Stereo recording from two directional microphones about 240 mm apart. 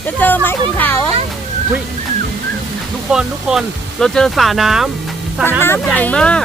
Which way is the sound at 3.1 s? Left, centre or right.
Centre.